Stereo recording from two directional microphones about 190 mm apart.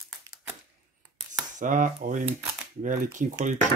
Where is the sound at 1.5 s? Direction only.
45° right (ahead or behind).